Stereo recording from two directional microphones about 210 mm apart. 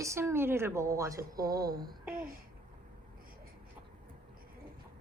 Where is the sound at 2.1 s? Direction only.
45° right (ahead or behind).